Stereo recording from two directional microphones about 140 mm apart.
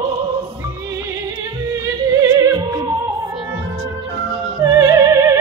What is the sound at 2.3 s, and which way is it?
Music, 25° right (ahead or behind).